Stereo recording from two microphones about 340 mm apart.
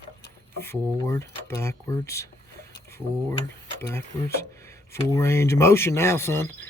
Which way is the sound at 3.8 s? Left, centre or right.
Centre.